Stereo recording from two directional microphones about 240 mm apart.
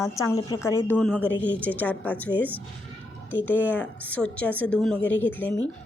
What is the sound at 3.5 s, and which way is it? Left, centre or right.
A woman's voice, centre.